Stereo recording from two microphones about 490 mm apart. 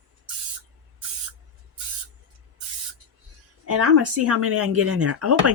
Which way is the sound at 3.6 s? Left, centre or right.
Right.